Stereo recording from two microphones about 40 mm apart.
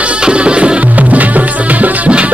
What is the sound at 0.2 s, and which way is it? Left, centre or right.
Music, right.